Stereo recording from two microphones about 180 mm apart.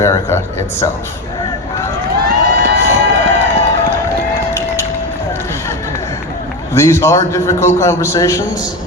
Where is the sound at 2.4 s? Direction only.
65° right (ahead or behind).